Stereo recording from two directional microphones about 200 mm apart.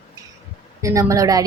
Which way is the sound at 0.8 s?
15° right (ahead or behind).